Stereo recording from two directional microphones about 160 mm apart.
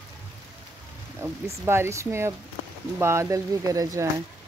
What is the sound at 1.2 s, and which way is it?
Speech, 15° right (ahead or behind).